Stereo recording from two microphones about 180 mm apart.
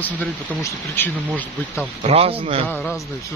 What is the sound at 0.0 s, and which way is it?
Speech, 15° left (ahead or behind).